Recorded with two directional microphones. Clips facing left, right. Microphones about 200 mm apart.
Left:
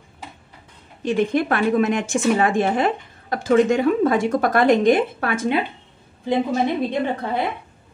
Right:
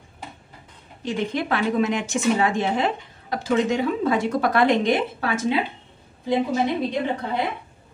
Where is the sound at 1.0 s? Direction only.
55° left (ahead or behind).